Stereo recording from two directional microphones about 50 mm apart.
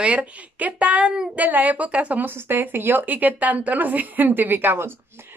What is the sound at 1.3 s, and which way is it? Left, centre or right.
Speech, right.